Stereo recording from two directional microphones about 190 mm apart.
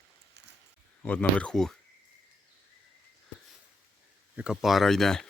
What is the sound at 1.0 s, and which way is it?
Speech, 10° left (ahead or behind).